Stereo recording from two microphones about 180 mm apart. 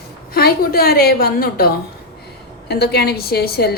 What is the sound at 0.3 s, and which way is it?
A woman's voice, 60° left (ahead or behind).